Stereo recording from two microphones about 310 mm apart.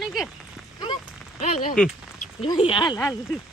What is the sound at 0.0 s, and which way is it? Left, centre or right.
Rain on surface, centre.